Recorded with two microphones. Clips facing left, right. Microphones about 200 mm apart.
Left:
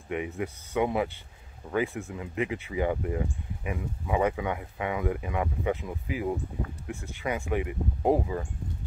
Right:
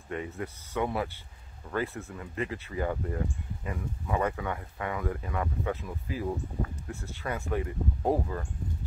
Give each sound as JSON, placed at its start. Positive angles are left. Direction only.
{"t": 0.1, "sound": "speech", "side_deg": 15}